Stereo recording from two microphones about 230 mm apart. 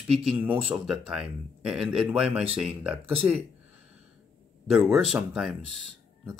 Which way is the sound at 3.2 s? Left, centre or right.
Right.